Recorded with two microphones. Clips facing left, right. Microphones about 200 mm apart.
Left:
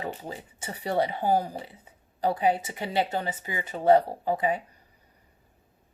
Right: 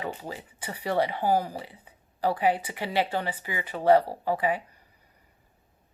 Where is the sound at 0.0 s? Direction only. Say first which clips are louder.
Even; 25° left (ahead or behind).